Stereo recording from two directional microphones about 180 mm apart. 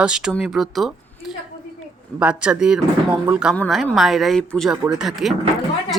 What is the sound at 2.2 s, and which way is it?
Speech, 5° right (ahead or behind).